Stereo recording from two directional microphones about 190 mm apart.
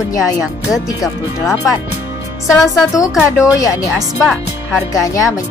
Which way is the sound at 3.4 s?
20° left (ahead or behind).